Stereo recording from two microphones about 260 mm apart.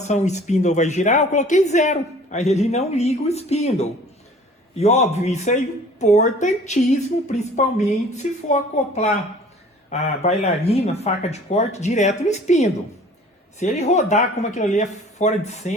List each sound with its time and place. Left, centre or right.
0.0 s speech: left